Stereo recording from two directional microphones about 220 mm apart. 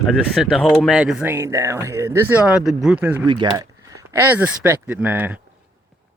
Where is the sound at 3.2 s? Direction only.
20° right (ahead or behind).